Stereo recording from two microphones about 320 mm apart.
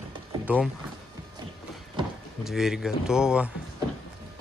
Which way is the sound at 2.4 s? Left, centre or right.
Centre.